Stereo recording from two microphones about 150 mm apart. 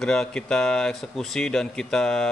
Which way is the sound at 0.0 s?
5° left (ahead or behind).